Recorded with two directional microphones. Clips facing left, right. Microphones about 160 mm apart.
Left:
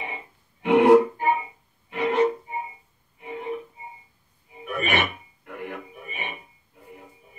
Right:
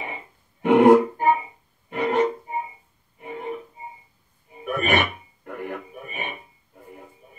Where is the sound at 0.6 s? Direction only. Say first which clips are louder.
Right 1 dB; 45° right (ahead or behind).